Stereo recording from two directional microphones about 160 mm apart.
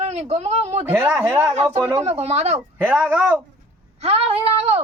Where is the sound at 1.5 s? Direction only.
40° right (ahead or behind).